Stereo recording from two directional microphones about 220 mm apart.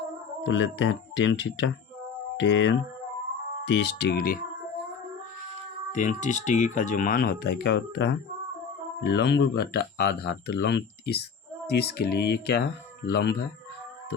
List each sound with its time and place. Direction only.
0.4 s speech: 55° left (ahead or behind)
5.9 s speech: 35° left (ahead or behind)